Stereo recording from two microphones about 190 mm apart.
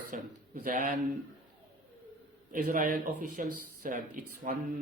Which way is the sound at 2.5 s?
45° right (ahead or behind).